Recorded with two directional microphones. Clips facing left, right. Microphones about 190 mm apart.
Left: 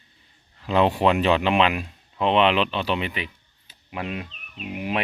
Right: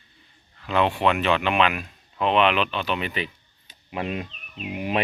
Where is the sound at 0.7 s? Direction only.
35° left (ahead or behind).